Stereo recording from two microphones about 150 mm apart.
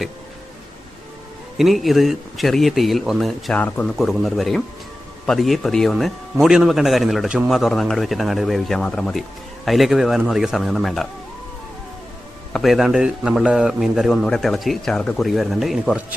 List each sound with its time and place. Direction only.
1.5 s a man's voice: centre (ahead or behind)
3.9 s a man's voice: centre (ahead or behind)
12.5 s a man's voice: centre (ahead or behind)